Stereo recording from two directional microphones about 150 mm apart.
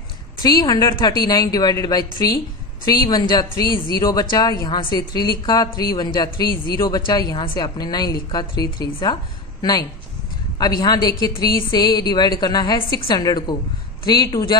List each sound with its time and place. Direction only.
0.4 s a woman's voice: 25° left (ahead or behind)
11.3 s a sound: 90° left
11.7 s a woman's voice: 25° left (ahead or behind)